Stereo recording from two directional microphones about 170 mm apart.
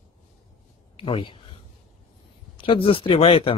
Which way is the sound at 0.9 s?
30° left (ahead or behind).